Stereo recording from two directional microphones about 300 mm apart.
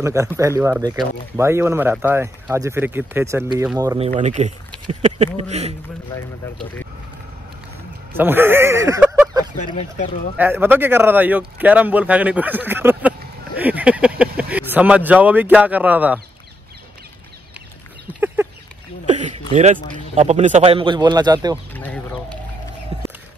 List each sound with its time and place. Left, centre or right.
0.0 s speech: centre
6.1 s speech: centre
8.2 s speech: centre
9.6 s speech: left
10.3 s speech: centre
18.2 s a sound: centre
19.0 s a sound: right
19.5 s speech: right
21.7 s chicken: centre